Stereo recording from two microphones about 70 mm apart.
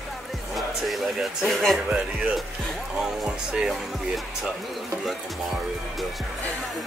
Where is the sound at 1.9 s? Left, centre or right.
Centre.